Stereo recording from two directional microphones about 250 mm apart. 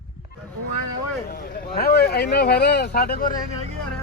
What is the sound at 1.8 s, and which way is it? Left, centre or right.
Speech, left.